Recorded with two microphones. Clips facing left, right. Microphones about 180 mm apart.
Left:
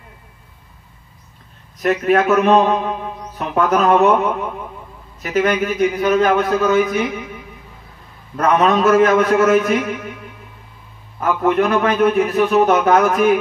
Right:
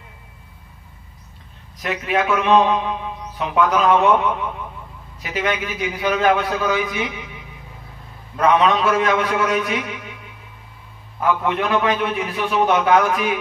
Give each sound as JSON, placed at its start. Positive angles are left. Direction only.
{"t": 1.8, "sound": "a man's voice", "side_deg": 45}
{"t": 11.1, "sound": "a man's voice", "side_deg": 45}